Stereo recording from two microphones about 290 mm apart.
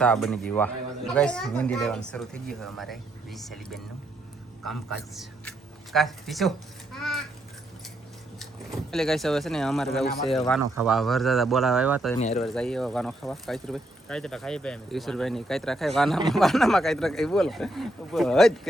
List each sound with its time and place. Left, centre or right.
0.0 s speech: centre
6.9 s a sound: centre
8.9 s speech: centre